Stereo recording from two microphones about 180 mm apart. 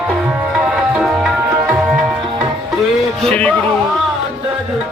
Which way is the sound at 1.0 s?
5° right (ahead or behind).